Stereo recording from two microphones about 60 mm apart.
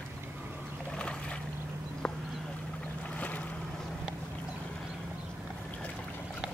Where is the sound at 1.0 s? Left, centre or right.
Centre.